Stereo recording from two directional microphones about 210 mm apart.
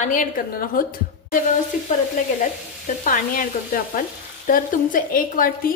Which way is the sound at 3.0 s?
40° left (ahead or behind).